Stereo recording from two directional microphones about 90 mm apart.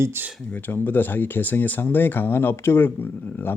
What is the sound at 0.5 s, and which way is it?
Speech, 20° left (ahead or behind).